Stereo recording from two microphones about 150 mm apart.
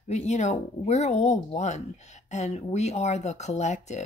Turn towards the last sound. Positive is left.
turn(degrees=50)  # may be behind; listen again after turning